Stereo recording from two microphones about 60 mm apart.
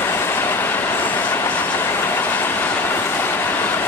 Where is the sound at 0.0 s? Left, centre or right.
Left.